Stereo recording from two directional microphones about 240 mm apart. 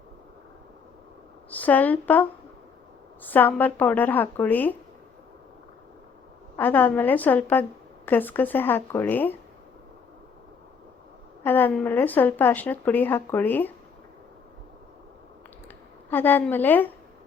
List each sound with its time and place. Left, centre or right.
1.5 s a woman's voice: centre
3.2 s a woman's voice: centre
6.6 s a woman's voice: centre
11.4 s a woman's voice: centre
16.0 s a woman's voice: centre